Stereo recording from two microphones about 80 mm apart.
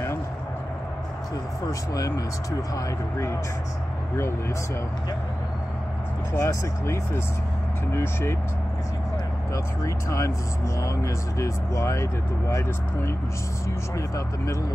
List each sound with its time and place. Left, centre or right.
1.7 s speech: left
6.3 s speech: left
9.5 s speech: left